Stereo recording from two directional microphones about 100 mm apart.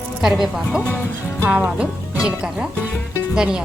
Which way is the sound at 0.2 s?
5° right (ahead or behind).